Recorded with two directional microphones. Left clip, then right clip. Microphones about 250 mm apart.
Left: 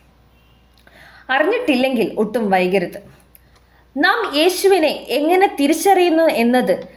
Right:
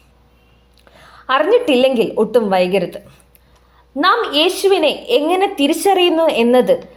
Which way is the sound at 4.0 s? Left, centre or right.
Centre.